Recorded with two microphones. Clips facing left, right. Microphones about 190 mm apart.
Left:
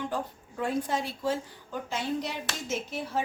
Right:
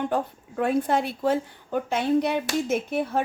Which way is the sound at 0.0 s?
60° right (ahead or behind).